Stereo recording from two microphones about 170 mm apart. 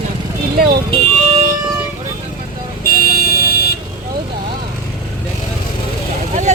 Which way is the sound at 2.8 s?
60° left (ahead or behind).